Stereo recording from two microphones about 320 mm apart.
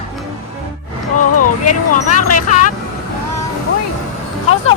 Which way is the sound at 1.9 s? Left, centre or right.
Left.